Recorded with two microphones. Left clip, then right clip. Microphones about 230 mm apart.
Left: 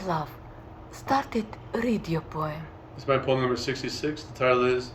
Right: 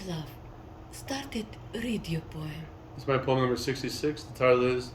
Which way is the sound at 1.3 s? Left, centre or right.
Centre.